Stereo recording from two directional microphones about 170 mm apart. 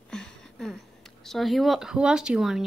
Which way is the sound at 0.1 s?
5° left (ahead or behind).